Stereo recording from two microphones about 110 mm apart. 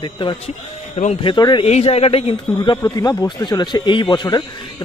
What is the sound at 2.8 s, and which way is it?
Speech, 40° left (ahead or behind).